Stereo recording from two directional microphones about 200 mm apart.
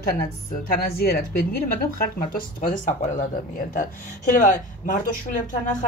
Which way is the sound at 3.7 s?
40° left (ahead or behind).